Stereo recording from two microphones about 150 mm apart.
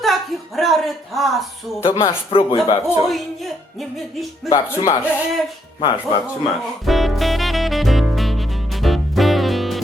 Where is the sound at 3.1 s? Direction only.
Centre (ahead or behind).